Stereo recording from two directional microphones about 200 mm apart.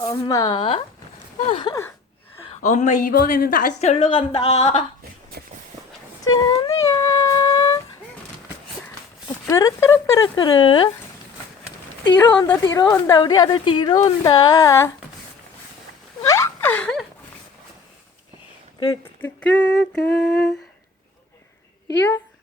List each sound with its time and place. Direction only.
0.0 s a woman's voice: 15° left (ahead or behind)
6.2 s humming: 20° left (ahead or behind)
9.5 s speech: 15° left (ahead or behind)
12.1 s a woman's voice: 10° left (ahead or behind)
16.2 s a sound: 15° left (ahead or behind)
19.2 s a sound: 5° left (ahead or behind)
21.8 s speech: 15° left (ahead or behind)